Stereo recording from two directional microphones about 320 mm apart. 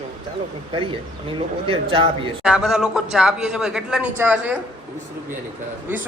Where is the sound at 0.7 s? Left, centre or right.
Centre.